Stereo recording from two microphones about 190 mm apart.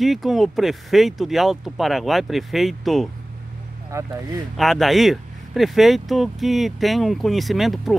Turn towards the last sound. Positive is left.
turn(degrees=0)  # may be behind; listen again after turning